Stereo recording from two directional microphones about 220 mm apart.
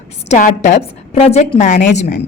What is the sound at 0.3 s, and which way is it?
A woman's voice, 35° left (ahead or behind).